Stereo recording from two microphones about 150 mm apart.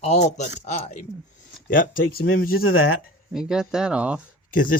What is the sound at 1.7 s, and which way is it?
Speech, 65° left (ahead or behind).